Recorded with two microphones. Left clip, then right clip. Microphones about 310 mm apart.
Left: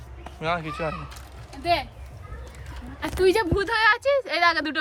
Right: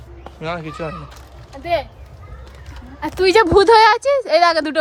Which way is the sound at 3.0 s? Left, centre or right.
Right.